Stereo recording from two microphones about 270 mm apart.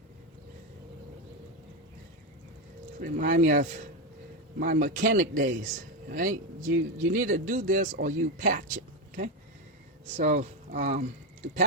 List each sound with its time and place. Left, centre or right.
3.0 s a man's voice: right